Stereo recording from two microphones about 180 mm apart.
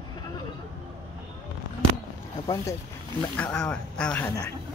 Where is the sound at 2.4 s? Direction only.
20° left (ahead or behind).